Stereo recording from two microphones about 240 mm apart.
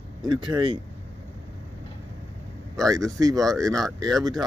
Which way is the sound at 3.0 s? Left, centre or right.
Centre.